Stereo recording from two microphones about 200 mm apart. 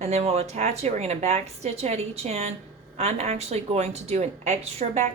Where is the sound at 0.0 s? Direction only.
30° right (ahead or behind).